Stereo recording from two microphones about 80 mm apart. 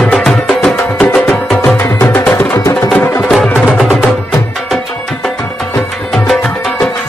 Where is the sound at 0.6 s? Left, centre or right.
Centre.